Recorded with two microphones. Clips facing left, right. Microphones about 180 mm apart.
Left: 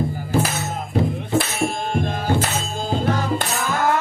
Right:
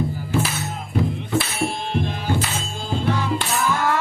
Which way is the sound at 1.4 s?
45° left (ahead or behind).